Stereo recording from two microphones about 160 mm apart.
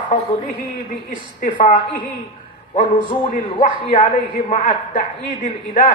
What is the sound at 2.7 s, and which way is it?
Speech, 45° left (ahead or behind).